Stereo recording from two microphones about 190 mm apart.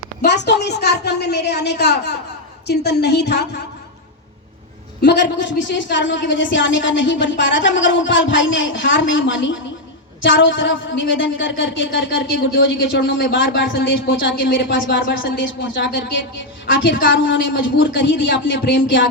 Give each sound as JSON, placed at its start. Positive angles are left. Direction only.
{"t": 0.2, "sound": "a woman's voice", "side_deg": 65}
{"t": 5.0, "sound": "a woman's voice", "side_deg": 65}